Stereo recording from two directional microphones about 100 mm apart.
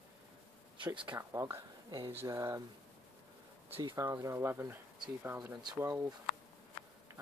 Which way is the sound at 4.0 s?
30° right (ahead or behind).